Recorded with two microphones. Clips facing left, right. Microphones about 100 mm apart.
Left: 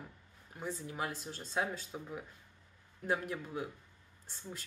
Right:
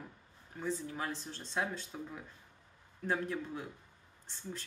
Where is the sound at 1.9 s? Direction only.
20° left (ahead or behind).